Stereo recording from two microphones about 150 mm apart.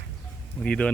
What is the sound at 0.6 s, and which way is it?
Speech, 5° left (ahead or behind).